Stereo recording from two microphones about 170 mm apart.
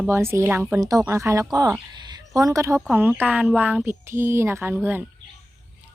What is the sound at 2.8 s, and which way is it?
Speech, 10° right (ahead or behind).